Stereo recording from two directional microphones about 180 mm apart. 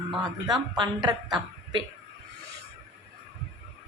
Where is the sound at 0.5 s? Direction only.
25° right (ahead or behind).